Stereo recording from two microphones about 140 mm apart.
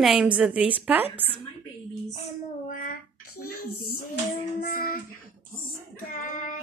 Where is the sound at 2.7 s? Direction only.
90° left.